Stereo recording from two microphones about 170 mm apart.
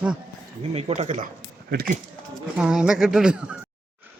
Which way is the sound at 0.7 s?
40° right (ahead or behind).